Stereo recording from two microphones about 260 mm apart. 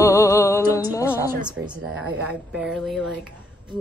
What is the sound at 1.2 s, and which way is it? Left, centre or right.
Speech, centre.